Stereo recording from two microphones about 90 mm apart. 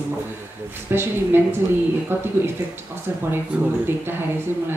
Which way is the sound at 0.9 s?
25° right (ahead or behind).